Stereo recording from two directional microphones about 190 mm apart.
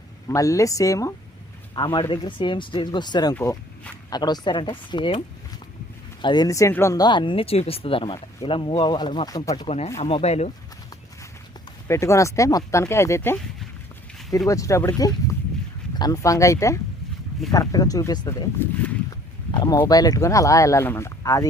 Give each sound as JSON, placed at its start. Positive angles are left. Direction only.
{"t": 0.3, "sound": "speech", "side_deg": 15}
{"t": 3.3, "sound": "speech", "side_deg": 10}
{"t": 4.1, "sound": "speech", "side_deg": 20}
{"t": 6.2, "sound": "speech", "side_deg": 20}
{"t": 9.6, "sound": "speech", "side_deg": 35}
{"t": 11.9, "sound": "speech", "side_deg": 15}
{"t": 19.5, "sound": "speech", "side_deg": 20}